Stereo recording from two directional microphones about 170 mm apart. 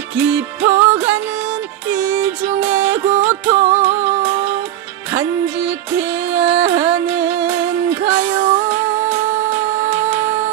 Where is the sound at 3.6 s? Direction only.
40° right (ahead or behind).